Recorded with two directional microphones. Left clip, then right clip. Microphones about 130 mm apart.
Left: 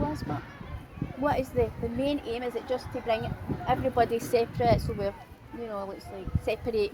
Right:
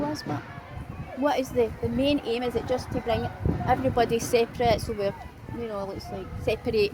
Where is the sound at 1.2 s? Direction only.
25° right (ahead or behind).